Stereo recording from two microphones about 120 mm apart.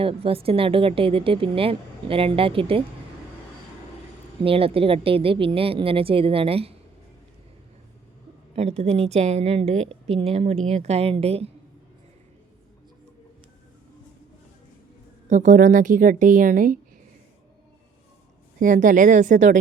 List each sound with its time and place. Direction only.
0.0 s speech: 50° right (ahead or behind)
4.4 s speech: 50° right (ahead or behind)
8.5 s a woman's voice: 65° right (ahead or behind)
15.3 s a woman's voice: 90° right
18.6 s a woman's voice: 90° right